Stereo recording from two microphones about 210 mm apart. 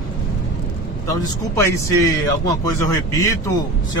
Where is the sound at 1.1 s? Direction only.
15° left (ahead or behind).